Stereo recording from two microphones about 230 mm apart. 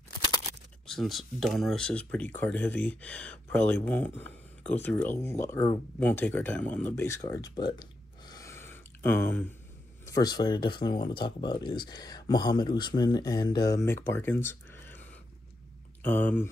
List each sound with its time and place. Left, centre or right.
0.8 s speech: centre
14.0 s a sound: centre
16.0 s speech: centre